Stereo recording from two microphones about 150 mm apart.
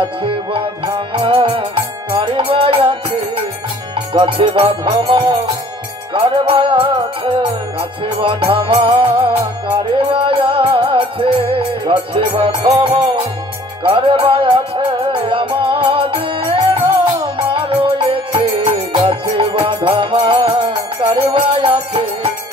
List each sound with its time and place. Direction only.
0.5 s music: 35° right (ahead or behind)
4.2 s music: 40° right (ahead or behind)